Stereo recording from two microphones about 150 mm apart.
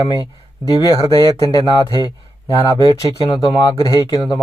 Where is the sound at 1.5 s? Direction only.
30° left (ahead or behind).